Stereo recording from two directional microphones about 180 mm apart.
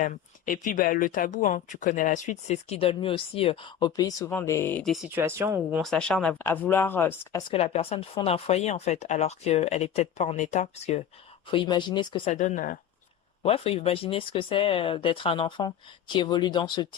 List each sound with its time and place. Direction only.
0.0 s speech: 50° left (ahead or behind); by 4.9 s 5° left (ahead or behind)
5.1 s speech: 15° right (ahead or behind)
5.8 s speech: 5° left (ahead or behind)
7.5 s speech: 35° left (ahead or behind)
11.4 s speech: 30° left (ahead or behind)
12.3 s speech: 40° left (ahead or behind)
13.4 s speech: 35° left (ahead or behind)